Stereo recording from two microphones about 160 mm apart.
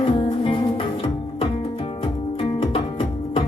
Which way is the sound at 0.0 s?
35° left (ahead or behind).